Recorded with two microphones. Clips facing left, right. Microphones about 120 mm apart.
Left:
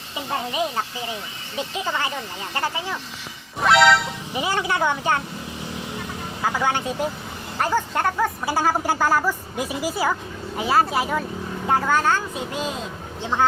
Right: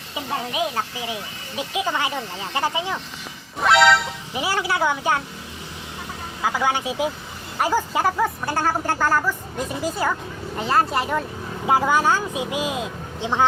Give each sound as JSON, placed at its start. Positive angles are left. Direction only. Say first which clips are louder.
{"t": 0.5, "sound": "speech", "louder": "even", "side_deg": -5}
{"t": 3.6, "sound": "speech", "louder": "even", "side_deg": 0}
{"t": 6.4, "sound": "speech", "louder": "right 1 dB", "side_deg": -10}
{"t": 8.4, "sound": "a woman's voice", "louder": "left 1 dB", "side_deg": 10}
{"t": 11.6, "sound": "speech", "louder": "right 2 dB", "side_deg": -10}